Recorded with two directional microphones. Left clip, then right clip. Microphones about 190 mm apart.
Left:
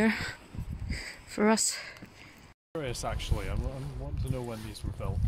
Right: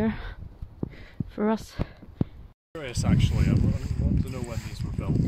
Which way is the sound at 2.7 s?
55° left (ahead or behind).